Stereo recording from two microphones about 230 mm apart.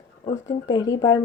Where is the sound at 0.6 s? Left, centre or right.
Centre.